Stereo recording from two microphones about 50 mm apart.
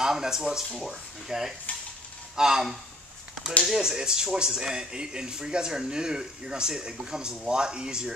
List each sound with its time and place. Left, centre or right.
0.0 s speech: centre